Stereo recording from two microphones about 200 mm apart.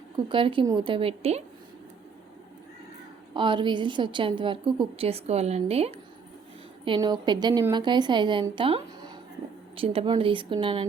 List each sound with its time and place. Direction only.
0.3 s a woman's voice: 25° right (ahead or behind)
3.3 s a woman's voice: 25° right (ahead or behind)